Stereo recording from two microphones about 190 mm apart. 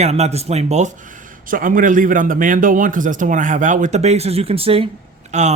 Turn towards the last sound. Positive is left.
turn(degrees=-40)  # may be behind; listen again after turning